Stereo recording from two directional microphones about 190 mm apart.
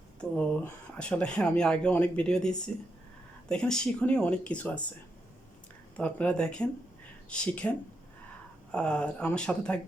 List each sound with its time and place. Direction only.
0.2 s speech: 5° left (ahead or behind)
6.0 s speech: 5° left (ahead or behind)